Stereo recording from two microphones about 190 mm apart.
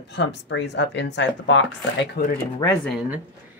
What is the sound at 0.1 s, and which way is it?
Speech, 65° left (ahead or behind).